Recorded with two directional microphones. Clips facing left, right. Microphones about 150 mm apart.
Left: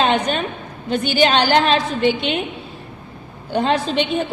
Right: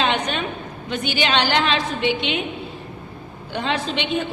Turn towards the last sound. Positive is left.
turn(degrees=40)  # may be behind; listen again after turning